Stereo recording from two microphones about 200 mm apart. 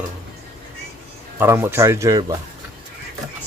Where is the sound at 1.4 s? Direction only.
10° right (ahead or behind).